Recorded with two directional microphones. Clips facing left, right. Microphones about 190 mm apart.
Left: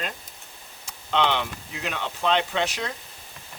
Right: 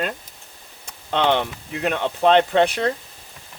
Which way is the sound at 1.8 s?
55° right (ahead or behind).